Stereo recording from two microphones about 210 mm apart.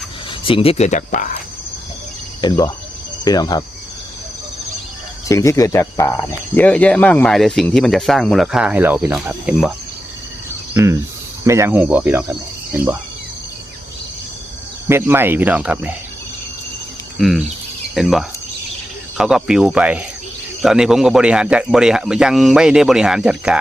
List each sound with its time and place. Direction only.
0.3 s speech: 25° left (ahead or behind)
2.4 s speech: 20° left (ahead or behind)
5.3 s speech: 15° left (ahead or behind); by 9.7 s 5° right (ahead or behind)
10.8 s speech: 15° right (ahead or behind)
14.8 s speech: 10° right (ahead or behind)
17.2 s speech: centre (ahead or behind)